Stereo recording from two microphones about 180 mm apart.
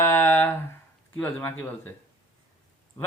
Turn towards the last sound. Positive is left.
turn(degrees=15)  # may be behind; listen again after turning